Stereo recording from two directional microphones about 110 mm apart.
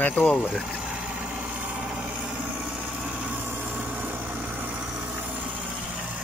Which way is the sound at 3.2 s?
15° right (ahead or behind).